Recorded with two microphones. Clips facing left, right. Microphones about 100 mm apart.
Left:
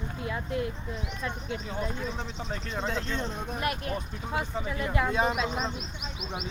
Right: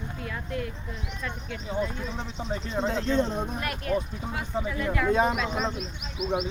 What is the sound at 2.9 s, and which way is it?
Speech, 30° right (ahead or behind).